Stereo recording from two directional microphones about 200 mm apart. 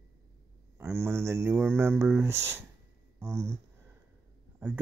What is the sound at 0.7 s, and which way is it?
Speech, 10° right (ahead or behind).